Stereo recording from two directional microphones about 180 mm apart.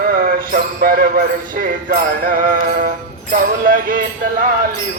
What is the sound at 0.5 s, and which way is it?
Speech, 55° right (ahead or behind).